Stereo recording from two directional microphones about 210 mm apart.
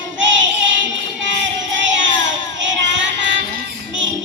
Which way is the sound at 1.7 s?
60° right (ahead or behind).